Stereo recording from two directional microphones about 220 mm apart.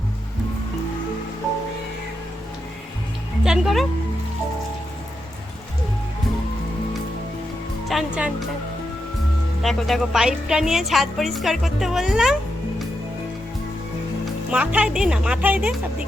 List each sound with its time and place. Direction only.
3.4 s speech: 5° right (ahead or behind)
7.9 s speech: 5° right (ahead or behind)
9.6 s a woman's voice: centre (ahead or behind)
14.5 s a woman's voice: 5° right (ahead or behind)